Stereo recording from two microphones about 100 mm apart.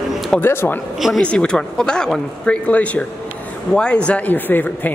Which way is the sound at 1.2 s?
10° left (ahead or behind).